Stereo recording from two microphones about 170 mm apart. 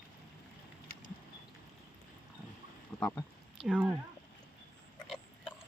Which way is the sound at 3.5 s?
5° right (ahead or behind).